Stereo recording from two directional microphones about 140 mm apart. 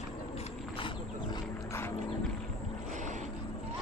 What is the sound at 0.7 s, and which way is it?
Wild animals, 35° left (ahead or behind).